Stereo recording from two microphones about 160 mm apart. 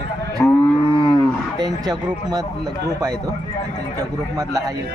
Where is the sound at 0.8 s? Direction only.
30° left (ahead or behind).